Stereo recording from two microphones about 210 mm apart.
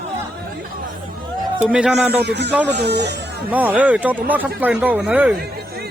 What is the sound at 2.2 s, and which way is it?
Speech, 50° right (ahead or behind).